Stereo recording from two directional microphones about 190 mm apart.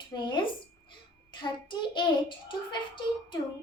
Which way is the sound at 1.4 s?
25° left (ahead or behind).